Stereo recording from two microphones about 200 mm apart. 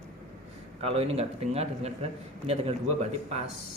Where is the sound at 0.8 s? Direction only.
30° right (ahead or behind).